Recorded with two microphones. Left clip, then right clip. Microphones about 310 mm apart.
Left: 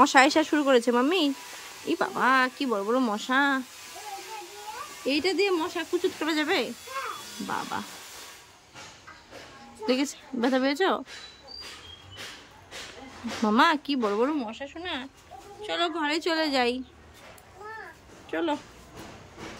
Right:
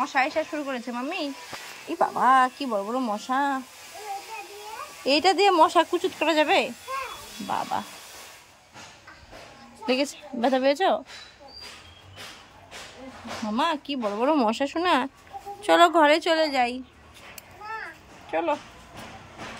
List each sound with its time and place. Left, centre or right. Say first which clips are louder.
0.0 s speech: left 5 dB; centre
5.0 s speech: right 6 dB; centre
7.7 s speech: right 4 dB; centre
9.8 s speech: right 2 dB; centre
13.5 s speech: left 4 dB; centre
14.2 s speech: right 6 dB; centre
18.3 s speech: right 3 dB; centre